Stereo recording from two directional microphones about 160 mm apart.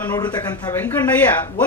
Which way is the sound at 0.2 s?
25° left (ahead or behind).